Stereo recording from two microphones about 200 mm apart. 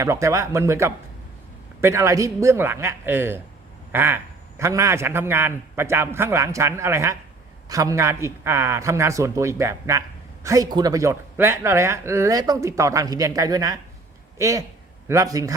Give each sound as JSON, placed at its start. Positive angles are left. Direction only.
{"t": 0.0, "sound": "a man's voice", "side_deg": -15}